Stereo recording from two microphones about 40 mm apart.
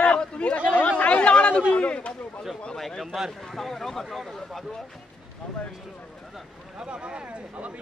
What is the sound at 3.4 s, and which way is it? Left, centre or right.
Speech, centre.